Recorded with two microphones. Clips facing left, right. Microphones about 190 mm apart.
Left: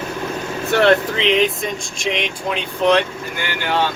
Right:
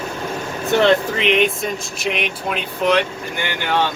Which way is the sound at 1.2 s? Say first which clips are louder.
Even; centre (ahead or behind).